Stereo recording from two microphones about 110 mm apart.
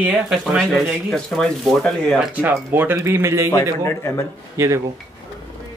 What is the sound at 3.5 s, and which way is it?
Speech, 25° left (ahead or behind).